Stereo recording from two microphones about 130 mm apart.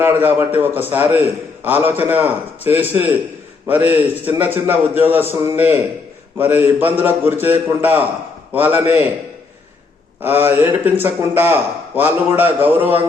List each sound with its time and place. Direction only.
0.0 s a man's voice: 15° right (ahead or behind)
10.2 s a man's voice: 15° right (ahead or behind)